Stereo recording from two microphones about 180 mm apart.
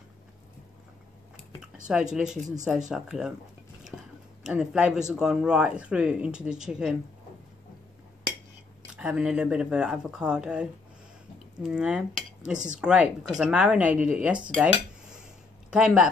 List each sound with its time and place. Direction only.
1.9 s speech: 5° right (ahead or behind)
3.9 s a sound: 5° left (ahead or behind)
4.4 s speech: 5° right (ahead or behind)
8.9 s speech: 5° right (ahead or behind)
11.6 s cutlery: 5° right (ahead or behind)
12.5 s speech: 45° right (ahead or behind)
12.8 s speech: 5° right (ahead or behind)
15.7 s speech: 5° right (ahead or behind)